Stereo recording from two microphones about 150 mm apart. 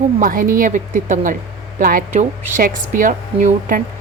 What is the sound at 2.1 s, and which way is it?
A woman's voice, 55° right (ahead or behind).